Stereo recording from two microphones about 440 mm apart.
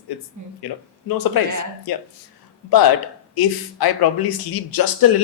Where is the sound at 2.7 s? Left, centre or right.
Left.